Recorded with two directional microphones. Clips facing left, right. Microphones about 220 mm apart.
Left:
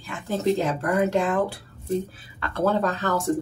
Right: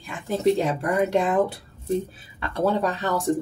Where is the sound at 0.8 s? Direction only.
20° right (ahead or behind).